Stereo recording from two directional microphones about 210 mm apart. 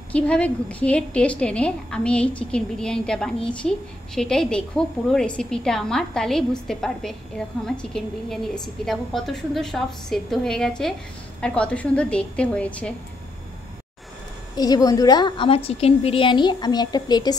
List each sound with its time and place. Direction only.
0.1 s a woman's voice: 5° left (ahead or behind)
14.5 s a woman's voice: 15° left (ahead or behind)